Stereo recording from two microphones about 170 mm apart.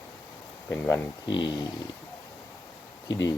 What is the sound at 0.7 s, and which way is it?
Speech, 10° left (ahead or behind).